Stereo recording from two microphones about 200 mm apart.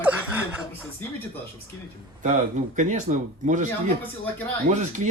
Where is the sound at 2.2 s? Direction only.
40° right (ahead or behind).